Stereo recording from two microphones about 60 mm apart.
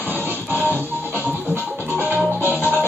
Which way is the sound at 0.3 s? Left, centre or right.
Right.